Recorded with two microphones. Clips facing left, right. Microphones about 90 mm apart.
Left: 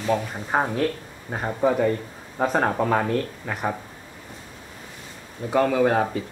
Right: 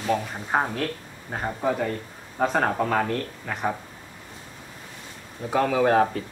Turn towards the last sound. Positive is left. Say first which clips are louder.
# right 1 dB
turn(degrees=0)  # may be behind; listen again after turning